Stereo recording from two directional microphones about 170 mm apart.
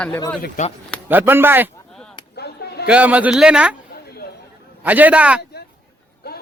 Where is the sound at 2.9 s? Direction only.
10° right (ahead or behind).